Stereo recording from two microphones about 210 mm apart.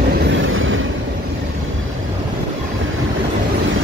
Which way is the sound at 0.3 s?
70° right (ahead or behind).